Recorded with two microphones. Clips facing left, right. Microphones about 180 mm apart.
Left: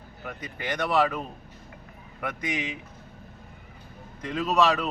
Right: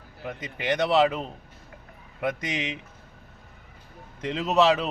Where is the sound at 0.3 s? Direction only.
20° right (ahead or behind).